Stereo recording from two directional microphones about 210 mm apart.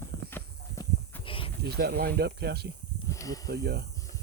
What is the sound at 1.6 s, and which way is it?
Speech, 50° right (ahead or behind).